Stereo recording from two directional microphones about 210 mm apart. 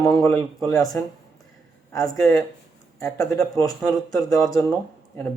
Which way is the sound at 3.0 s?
15° left (ahead or behind).